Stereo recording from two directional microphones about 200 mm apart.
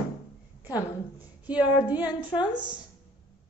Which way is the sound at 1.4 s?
5° right (ahead or behind).